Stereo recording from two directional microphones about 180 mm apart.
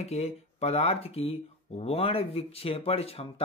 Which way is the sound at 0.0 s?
35° left (ahead or behind).